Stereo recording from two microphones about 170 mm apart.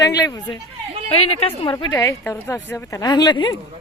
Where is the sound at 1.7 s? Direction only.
20° left (ahead or behind).